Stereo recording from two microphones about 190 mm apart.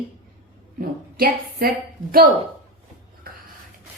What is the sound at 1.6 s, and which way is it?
Speech, 55° right (ahead or behind).